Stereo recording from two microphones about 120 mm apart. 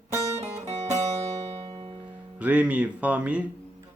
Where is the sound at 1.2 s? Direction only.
55° right (ahead or behind).